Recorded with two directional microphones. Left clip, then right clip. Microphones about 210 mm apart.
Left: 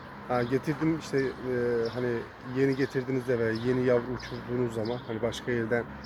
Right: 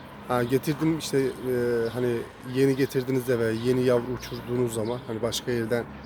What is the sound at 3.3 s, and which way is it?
Speech, 15° right (ahead or behind).